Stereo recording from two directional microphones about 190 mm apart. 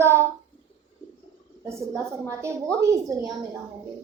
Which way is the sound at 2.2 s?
15° right (ahead or behind).